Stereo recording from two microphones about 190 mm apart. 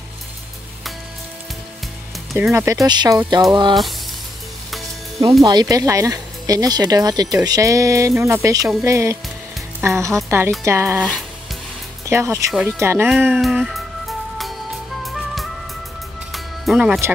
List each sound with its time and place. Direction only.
2.3 s speech: 10° right (ahead or behind)
5.4 s speech: 20° right (ahead or behind)
12.1 s speech: 15° right (ahead or behind)
13.1 s music: centre (ahead or behind)